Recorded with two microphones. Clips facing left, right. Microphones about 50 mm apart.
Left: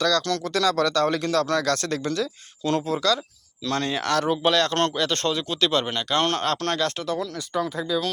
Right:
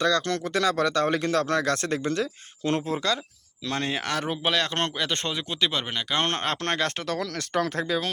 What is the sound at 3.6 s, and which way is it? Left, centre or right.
Speech, centre.